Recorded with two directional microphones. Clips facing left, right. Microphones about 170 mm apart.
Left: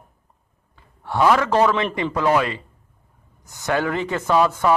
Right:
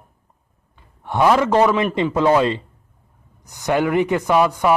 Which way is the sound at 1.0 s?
15° right (ahead or behind).